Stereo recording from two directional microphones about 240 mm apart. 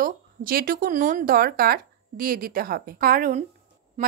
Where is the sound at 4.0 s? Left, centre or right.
Right.